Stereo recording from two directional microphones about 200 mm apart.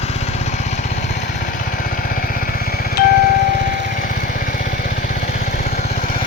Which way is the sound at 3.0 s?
50° left (ahead or behind).